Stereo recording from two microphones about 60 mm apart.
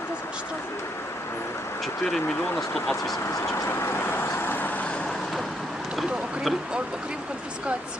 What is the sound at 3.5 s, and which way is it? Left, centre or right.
Vehicle, left.